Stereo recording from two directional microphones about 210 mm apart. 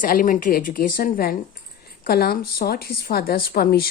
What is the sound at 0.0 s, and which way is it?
A woman's voice, 40° left (ahead or behind).